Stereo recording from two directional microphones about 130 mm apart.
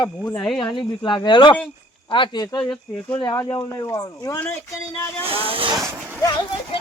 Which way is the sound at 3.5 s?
30° left (ahead or behind).